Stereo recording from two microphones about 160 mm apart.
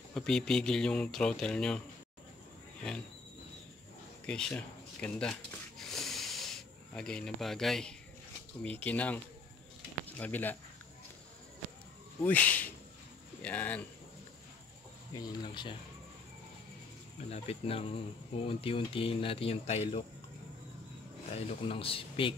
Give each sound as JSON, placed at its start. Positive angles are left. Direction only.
{"t": 0.1, "sound": "speech", "side_deg": 5}
{"t": 4.3, "sound": "a sound", "side_deg": 5}
{"t": 8.6, "sound": "speech", "side_deg": 10}
{"t": 12.2, "sound": "speech", "side_deg": 10}
{"t": 15.1, "sound": "speech", "side_deg": 30}
{"t": 17.3, "sound": "speech", "side_deg": 40}
{"t": 21.3, "sound": "speech", "side_deg": 40}